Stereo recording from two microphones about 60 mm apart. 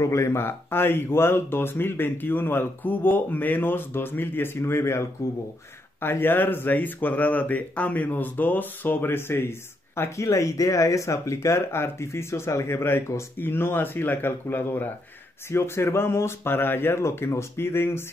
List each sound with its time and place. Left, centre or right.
0.0 s speech: left
10.1 s speech: left